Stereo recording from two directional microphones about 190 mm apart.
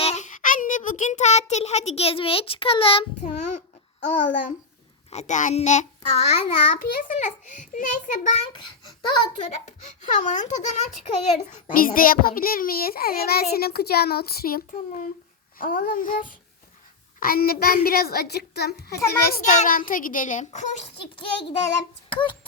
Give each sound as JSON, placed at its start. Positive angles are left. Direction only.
{"t": 0.0, "sound": "child singing", "side_deg": 35}
{"t": 4.0, "sound": "a child's voice", "side_deg": 40}
{"t": 9.0, "sound": "a child's voice", "side_deg": 25}
{"t": 9.8, "sound": "a child's voice", "side_deg": 40}
{"t": 14.7, "sound": "a child's voice", "side_deg": 40}
{"t": 19.2, "sound": "a child's voice", "side_deg": 50}